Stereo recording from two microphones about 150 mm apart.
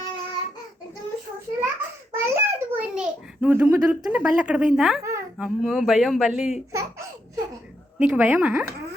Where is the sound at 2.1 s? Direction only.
15° right (ahead or behind).